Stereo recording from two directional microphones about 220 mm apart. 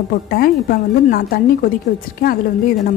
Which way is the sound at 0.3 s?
40° left (ahead or behind).